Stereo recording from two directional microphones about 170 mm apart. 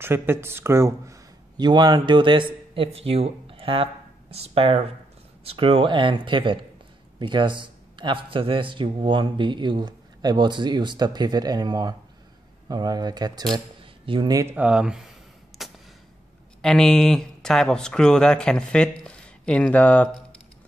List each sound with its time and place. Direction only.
0.0 s a man's voice: 15° right (ahead or behind)
14.5 s speech: 5° right (ahead or behind)
15.5 s a sound: centre (ahead or behind)
16.6 s speech: 5° left (ahead or behind)